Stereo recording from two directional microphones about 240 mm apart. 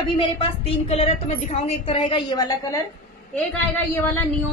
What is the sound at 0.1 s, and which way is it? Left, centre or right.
A woman's voice, left.